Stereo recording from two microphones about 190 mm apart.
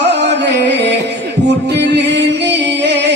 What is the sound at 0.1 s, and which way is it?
Music, 65° right (ahead or behind).